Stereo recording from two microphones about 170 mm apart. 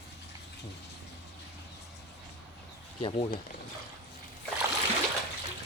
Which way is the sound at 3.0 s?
30° left (ahead or behind).